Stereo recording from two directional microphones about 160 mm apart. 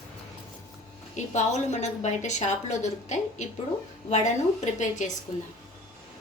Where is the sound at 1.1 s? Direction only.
45° left (ahead or behind).